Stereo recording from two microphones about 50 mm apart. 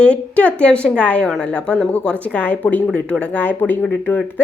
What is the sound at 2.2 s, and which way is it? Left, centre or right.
A woman's voice, left.